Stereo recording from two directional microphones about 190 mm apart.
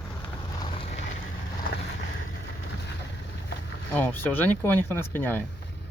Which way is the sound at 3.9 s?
10° left (ahead or behind).